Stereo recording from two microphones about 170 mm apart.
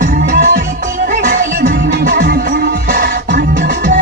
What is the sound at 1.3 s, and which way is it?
Music, 60° right (ahead or behind).